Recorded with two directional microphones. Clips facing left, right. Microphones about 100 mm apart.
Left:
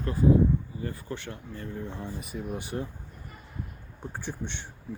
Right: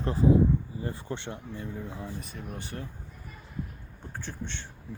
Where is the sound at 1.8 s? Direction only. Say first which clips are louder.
Left 1 dB; 5° right (ahead or behind); by 2.9 s 15° left (ahead or behind).